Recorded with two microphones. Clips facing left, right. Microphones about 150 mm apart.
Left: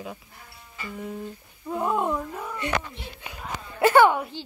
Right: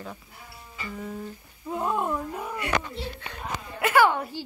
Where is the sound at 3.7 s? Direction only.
30° left (ahead or behind).